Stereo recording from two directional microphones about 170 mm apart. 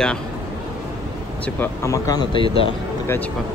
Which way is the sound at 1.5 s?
20° left (ahead or behind).